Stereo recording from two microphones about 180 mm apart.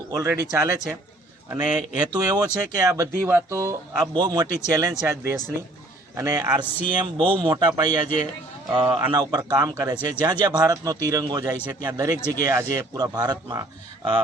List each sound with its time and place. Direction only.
0.1 s speech: 15° right (ahead or behind)
2.1 s speech: 20° right (ahead or behind)
4.0 s a man's voice: 25° right (ahead or behind)